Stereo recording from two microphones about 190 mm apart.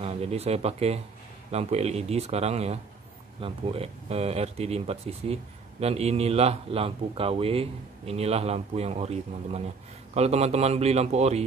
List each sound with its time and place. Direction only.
0.0 s speech: 35° right (ahead or behind)